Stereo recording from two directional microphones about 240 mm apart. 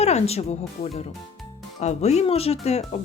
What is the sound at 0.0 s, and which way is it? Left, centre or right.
Speech, left.